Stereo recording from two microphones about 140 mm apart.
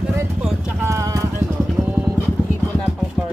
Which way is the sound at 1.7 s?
15° right (ahead or behind).